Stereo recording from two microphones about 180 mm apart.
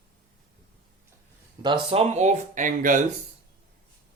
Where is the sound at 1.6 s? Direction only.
25° right (ahead or behind); by 3.0 s 45° right (ahead or behind).